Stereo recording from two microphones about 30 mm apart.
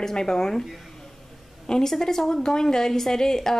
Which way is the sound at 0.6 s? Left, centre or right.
Centre.